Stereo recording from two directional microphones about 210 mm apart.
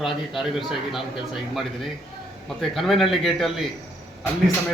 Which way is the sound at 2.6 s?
Centre (ahead or behind).